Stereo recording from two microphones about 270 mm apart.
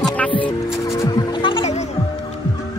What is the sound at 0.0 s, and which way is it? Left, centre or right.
Music, centre.